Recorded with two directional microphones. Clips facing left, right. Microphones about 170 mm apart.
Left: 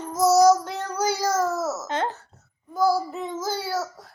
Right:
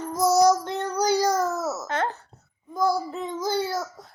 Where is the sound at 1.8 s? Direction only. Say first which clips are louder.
Even; 20° left (ahead or behind).